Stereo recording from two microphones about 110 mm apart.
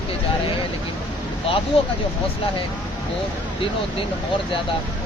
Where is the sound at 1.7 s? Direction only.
60° left (ahead or behind).